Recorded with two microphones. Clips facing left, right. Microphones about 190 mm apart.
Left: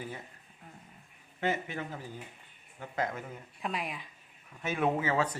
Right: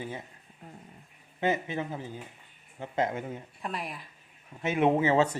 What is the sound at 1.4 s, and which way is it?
Speech, 20° right (ahead or behind).